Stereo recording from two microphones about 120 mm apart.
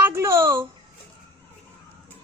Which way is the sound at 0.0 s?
20° right (ahead or behind).